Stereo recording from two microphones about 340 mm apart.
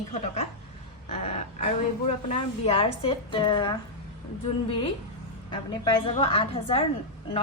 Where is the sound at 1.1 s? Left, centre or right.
Centre.